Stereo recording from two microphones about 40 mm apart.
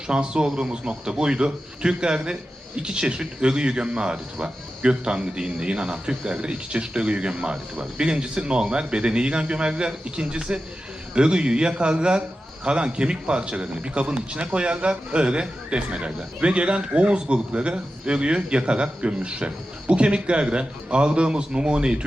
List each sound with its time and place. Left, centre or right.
0.1 s speech: right